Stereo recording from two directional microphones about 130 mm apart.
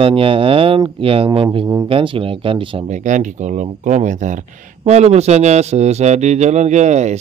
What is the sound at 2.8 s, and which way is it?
Speech, 70° right (ahead or behind).